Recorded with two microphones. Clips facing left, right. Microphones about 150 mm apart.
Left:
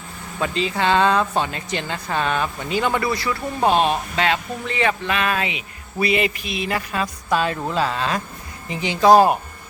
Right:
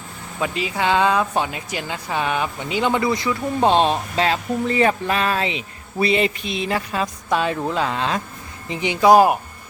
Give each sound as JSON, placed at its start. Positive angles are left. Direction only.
{"t": 0.3, "sound": "speech", "side_deg": -10}